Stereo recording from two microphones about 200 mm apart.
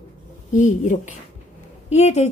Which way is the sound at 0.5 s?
40° left (ahead or behind).